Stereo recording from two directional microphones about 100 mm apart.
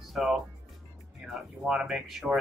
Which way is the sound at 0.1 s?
5° right (ahead or behind).